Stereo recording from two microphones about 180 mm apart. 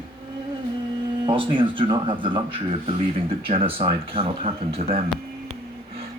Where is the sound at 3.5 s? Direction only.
30° right (ahead or behind).